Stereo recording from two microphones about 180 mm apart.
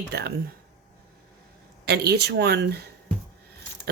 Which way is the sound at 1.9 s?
65° right (ahead or behind).